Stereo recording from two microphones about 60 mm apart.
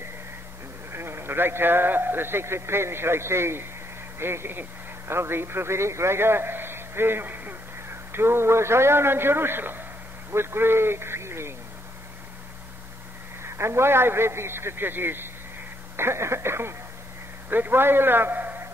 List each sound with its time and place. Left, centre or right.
0.9 s a man's voice: right
8.1 s a man's voice: right
13.4 s a man's voice: right
16.0 s a man's voice: right